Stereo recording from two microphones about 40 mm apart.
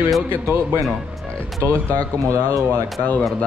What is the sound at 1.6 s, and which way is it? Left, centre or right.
Speech, left.